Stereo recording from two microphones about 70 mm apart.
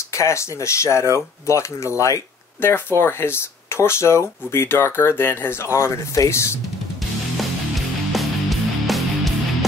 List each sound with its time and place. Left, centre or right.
0.1 s speech: left
2.6 s speech: left
5.8 s speech: left
8.1 s music: centre